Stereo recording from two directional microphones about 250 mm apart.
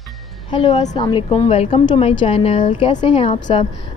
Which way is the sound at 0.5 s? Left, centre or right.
Left.